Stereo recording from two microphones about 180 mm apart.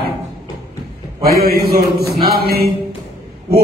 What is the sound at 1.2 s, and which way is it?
Speech, 55° right (ahead or behind).